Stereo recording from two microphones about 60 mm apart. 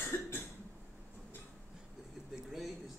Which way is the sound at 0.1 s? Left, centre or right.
Left.